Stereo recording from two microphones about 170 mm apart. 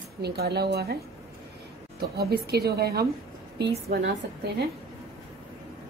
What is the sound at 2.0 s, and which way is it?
A woman's voice, 70° right (ahead or behind).